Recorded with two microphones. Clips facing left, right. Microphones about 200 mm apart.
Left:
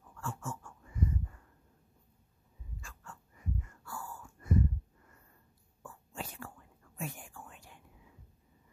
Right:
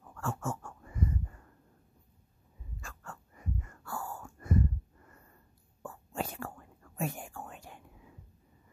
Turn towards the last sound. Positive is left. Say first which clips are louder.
# right 6 dB
turn(degrees=-55)  # may be behind; listen again after turning